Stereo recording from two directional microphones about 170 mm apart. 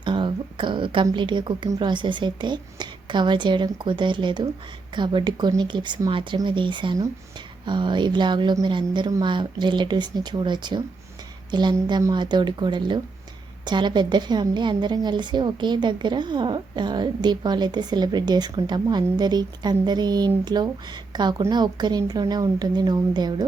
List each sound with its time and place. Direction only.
0.0 s a woman's voice: 30° right (ahead or behind)